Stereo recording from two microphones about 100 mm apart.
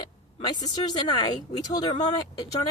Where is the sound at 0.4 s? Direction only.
40° left (ahead or behind).